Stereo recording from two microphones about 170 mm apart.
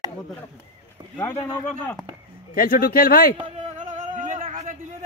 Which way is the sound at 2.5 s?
55° left (ahead or behind).